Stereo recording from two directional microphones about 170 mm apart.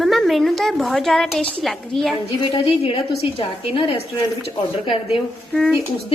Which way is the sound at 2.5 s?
30° left (ahead or behind).